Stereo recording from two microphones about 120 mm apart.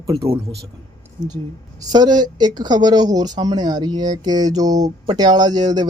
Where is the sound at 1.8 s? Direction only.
35° right (ahead or behind).